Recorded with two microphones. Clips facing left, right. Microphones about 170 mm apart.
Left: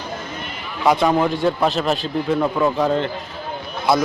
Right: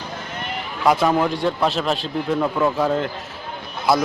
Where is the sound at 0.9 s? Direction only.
Centre (ahead or behind).